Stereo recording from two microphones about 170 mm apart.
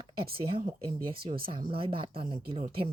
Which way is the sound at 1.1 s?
30° right (ahead or behind).